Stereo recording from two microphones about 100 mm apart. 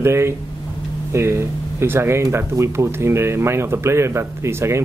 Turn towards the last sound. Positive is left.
turn(degrees=-25)  # may be behind; listen again after turning